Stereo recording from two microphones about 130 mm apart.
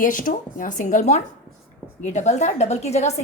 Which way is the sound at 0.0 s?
90° left.